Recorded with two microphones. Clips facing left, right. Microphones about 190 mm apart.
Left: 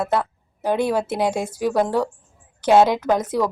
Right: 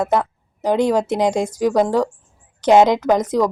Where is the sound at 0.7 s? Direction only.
15° right (ahead or behind).